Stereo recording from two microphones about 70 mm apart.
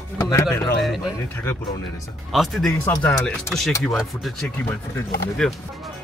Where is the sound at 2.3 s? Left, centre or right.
Centre.